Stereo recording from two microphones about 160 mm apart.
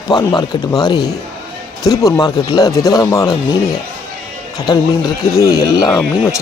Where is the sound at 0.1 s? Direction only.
25° left (ahead or behind).